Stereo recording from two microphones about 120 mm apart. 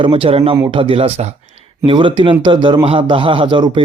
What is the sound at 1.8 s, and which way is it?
Speech, 45° right (ahead or behind).